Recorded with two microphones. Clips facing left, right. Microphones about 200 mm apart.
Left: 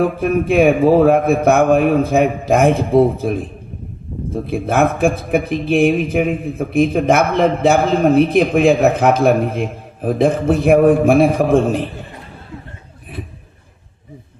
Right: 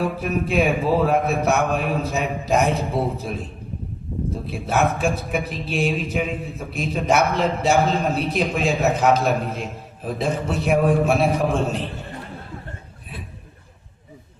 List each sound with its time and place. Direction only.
0.0 s a man's voice: 50° left (ahead or behind)